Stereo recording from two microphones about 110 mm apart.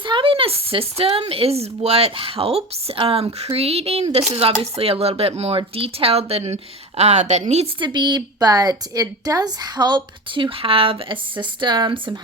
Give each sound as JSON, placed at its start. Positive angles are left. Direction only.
{"t": 0.0, "sound": "speech", "side_deg": -50}
{"t": 3.0, "sound": "speech", "side_deg": -50}
{"t": 7.8, "sound": "a woman's voice", "side_deg": -40}